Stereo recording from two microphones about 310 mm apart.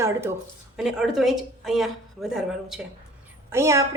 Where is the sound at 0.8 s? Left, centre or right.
Centre.